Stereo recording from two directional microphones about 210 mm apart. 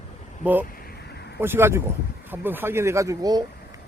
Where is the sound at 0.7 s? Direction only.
45° left (ahead or behind).